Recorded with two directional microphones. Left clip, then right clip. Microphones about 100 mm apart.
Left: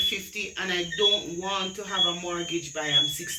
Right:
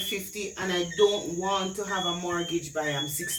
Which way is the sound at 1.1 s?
40° right (ahead or behind).